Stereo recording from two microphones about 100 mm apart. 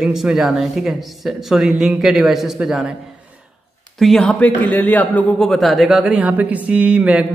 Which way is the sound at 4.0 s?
5° left (ahead or behind).